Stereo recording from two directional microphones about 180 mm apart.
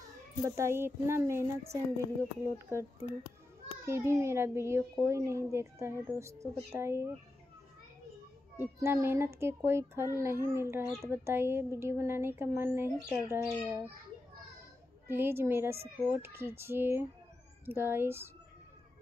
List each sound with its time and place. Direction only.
0.5 s speech: 15° right (ahead or behind)
8.5 s speech: 15° right (ahead or behind)
15.0 s speech: 10° right (ahead or behind)